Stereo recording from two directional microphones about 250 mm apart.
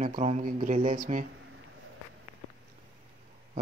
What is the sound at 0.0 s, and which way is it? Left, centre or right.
Speech, right.